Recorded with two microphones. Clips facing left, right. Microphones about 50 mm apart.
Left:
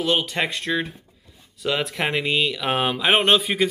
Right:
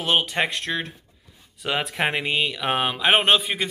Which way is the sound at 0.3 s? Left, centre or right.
Centre.